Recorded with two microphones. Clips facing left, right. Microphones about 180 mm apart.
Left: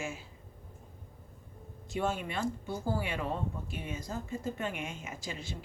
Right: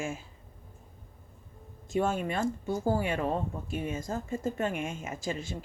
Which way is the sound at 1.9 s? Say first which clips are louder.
Right 5 dB; 50° right (ahead or behind).